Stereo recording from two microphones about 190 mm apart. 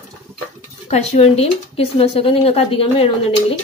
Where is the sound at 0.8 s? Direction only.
35° left (ahead or behind).